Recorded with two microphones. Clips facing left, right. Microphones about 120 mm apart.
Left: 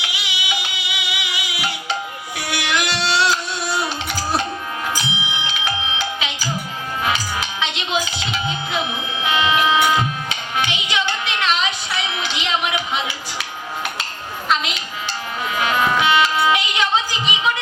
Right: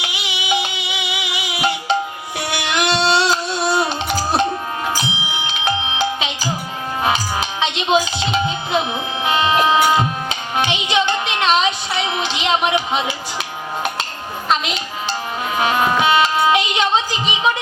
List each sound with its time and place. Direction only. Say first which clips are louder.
0.0 s music: right 2 dB; 25° right (ahead or behind)
15.5 s music: right 2 dB; 30° right (ahead or behind)